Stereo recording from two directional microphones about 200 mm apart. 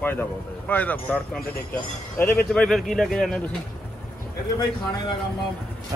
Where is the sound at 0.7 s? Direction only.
10° left (ahead or behind).